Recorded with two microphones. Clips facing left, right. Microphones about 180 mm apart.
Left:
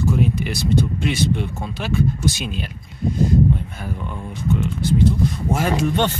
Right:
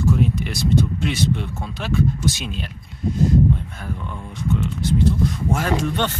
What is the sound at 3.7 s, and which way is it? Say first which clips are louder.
Speech: left 2 dB; 10° left (ahead or behind).